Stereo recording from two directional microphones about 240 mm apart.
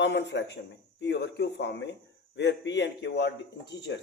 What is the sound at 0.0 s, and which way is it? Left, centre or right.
A man's voice, left.